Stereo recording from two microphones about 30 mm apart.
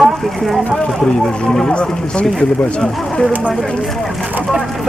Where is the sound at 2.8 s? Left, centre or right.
Centre.